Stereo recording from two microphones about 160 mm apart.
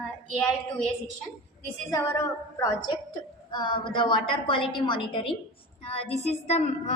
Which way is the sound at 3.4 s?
30° left (ahead or behind).